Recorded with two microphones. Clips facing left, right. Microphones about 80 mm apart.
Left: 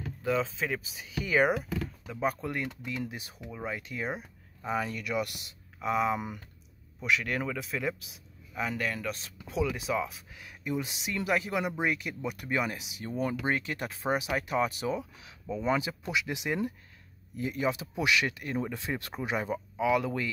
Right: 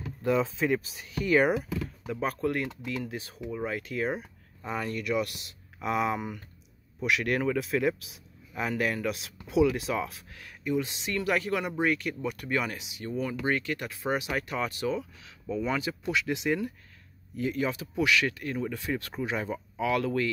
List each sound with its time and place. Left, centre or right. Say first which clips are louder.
0.2 s a man's voice: right 3 dB; centre
13.1 s speech: right 1 dB; left
17.4 s speech: right 1 dB; centre